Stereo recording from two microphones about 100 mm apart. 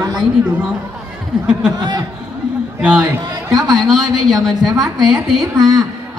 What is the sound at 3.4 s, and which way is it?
Speech, 45° right (ahead or behind).